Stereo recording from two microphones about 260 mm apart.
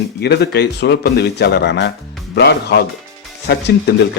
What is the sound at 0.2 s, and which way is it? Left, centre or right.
A man's voice, left.